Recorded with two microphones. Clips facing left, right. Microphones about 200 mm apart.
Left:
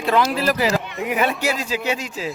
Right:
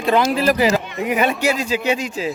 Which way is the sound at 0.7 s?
Centre (ahead or behind).